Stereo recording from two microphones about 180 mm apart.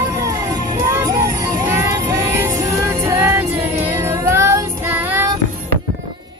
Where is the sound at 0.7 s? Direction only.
20° right (ahead or behind).